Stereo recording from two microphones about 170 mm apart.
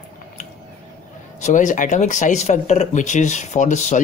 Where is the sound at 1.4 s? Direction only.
45° left (ahead or behind).